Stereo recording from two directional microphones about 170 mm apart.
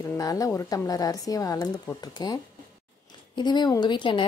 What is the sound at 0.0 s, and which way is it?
A woman's voice, 20° left (ahead or behind).